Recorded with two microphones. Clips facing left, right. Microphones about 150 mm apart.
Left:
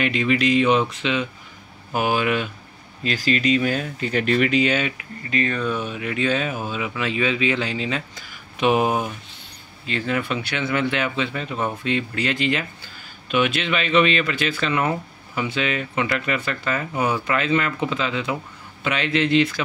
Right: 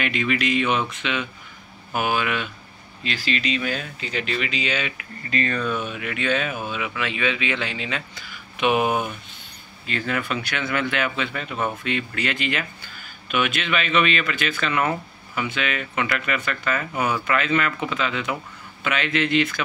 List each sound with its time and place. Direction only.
0.0 s speech: 35° left (ahead or behind); by 4.9 s 50° left (ahead or behind)
4.9 s speech: 20° left (ahead or behind)